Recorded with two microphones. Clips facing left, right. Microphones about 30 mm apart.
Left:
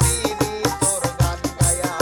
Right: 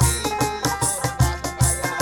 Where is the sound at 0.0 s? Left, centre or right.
Centre.